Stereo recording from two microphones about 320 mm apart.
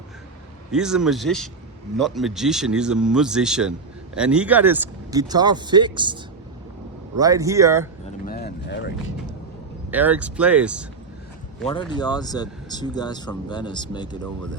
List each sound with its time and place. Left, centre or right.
0.7 s speech: centre
7.2 s speech: centre
8.3 s a sound: left
9.9 s speech: centre
11.6 s speech: centre